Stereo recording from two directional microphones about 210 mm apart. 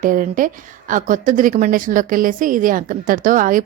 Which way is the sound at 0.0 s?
40° right (ahead or behind).